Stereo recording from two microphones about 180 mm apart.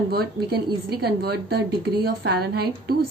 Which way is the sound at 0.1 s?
60° right (ahead or behind).